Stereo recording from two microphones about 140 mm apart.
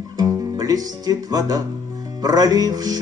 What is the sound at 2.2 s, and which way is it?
Music, 25° right (ahead or behind).